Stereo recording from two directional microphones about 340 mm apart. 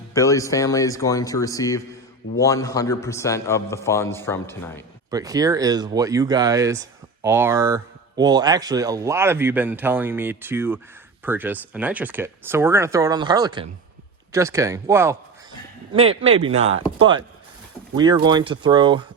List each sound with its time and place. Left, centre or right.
0.1 s a man's voice: centre
5.1 s speech: centre